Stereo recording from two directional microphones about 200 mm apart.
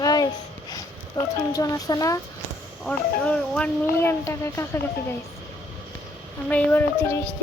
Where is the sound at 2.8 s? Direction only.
5° left (ahead or behind).